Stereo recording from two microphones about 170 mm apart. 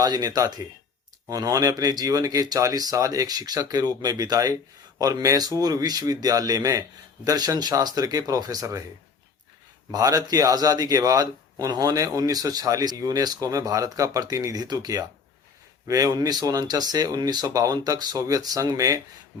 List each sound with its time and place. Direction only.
0.0 s a man's voice: 25° right (ahead or behind)
9.9 s a man's voice: 20° right (ahead or behind)